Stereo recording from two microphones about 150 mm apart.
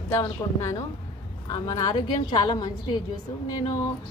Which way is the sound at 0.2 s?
25° left (ahead or behind).